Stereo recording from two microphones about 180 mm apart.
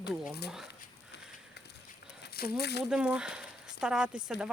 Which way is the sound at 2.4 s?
60° left (ahead or behind).